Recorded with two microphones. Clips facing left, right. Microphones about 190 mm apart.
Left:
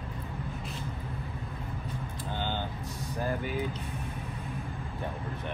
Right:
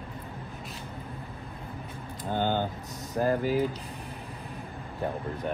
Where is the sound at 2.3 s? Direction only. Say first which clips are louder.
Right 8 dB; 45° right (ahead or behind).